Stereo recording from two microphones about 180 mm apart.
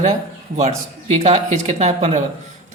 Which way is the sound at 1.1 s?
40° right (ahead or behind).